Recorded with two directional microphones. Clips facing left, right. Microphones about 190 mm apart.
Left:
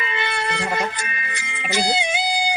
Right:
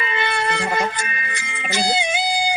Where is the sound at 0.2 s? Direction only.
50° right (ahead or behind).